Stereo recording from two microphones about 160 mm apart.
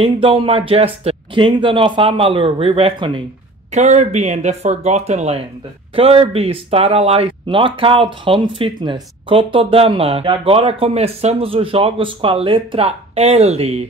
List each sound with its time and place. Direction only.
0.0 s speech: 35° right (ahead or behind)
3.7 s speech: 50° right (ahead or behind)